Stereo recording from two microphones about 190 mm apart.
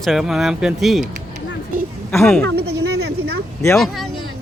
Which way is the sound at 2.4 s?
60° right (ahead or behind).